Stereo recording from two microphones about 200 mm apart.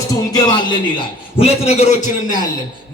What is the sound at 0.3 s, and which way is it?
A man's voice, 20° left (ahead or behind).